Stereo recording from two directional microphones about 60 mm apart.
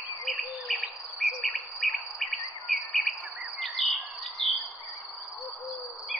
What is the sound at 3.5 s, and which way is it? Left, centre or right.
Bird vocalization, centre.